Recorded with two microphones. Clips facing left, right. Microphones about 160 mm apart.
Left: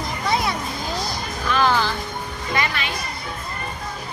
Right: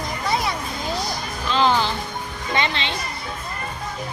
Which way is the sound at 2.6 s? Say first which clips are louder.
Right 1 dB; 25° right (ahead or behind).